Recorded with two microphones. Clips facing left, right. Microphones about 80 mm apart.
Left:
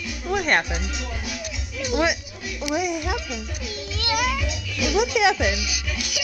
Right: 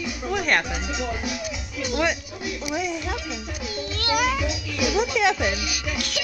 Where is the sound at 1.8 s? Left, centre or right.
Centre.